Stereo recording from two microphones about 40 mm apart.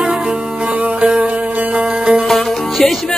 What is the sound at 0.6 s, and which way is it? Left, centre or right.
Music, right.